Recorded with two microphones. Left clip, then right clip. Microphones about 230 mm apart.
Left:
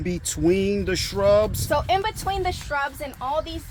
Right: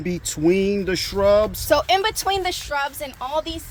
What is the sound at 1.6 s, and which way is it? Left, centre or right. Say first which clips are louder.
Speech: right 4 dB; right.